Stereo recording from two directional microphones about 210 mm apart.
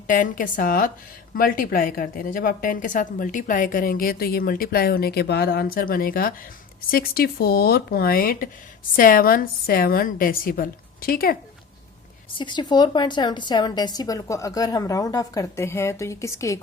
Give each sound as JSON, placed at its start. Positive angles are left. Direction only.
{"t": 0.1, "sound": "a woman's voice", "side_deg": 40}
{"t": 12.3, "sound": "a woman's voice", "side_deg": 20}